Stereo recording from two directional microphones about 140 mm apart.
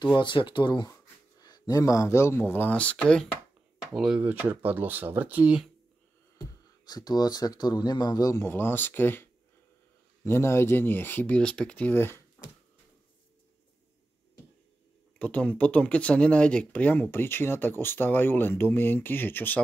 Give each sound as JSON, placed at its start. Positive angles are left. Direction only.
{"t": 0.2, "sound": "speech", "side_deg": 35}
{"t": 6.9, "sound": "speech", "side_deg": 30}
{"t": 12.4, "sound": "finger snapping", "side_deg": 25}
{"t": 15.1, "sound": "speech", "side_deg": 10}